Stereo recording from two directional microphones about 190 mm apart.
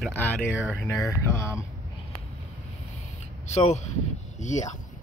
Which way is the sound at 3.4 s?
35° left (ahead or behind).